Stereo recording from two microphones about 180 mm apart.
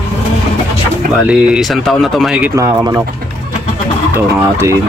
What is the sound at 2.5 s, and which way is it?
Speech, 15° right (ahead or behind).